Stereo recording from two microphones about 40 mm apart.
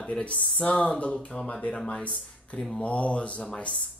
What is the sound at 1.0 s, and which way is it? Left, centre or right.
Speech, left.